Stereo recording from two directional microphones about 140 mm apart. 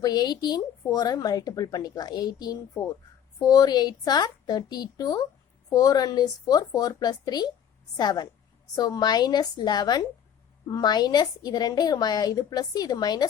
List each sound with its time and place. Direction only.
0.0 s speech: 30° left (ahead or behind)